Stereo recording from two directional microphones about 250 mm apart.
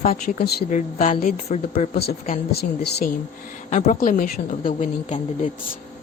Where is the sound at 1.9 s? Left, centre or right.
Left.